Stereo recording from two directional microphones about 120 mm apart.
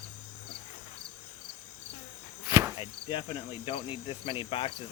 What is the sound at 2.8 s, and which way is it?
Cricket, 45° left (ahead or behind).